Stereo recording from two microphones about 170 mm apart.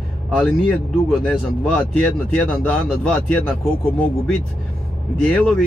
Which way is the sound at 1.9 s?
10° left (ahead or behind).